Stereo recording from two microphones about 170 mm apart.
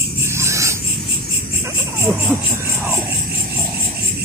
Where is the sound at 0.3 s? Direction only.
15° right (ahead or behind).